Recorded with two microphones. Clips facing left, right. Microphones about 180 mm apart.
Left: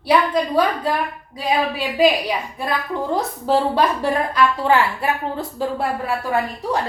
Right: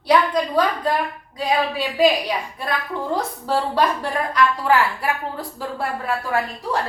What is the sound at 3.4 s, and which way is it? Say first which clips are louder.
A woman's voice: left 3 dB; 25° left (ahead or behind).